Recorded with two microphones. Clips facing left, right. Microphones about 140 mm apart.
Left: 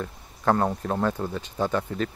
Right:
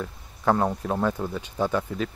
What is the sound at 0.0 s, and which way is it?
Speech, 5° right (ahead or behind).